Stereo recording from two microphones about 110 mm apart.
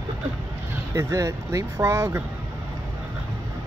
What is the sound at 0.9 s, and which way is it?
Speech, 25° right (ahead or behind).